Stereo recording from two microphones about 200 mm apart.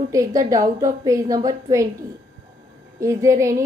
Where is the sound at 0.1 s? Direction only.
15° right (ahead or behind).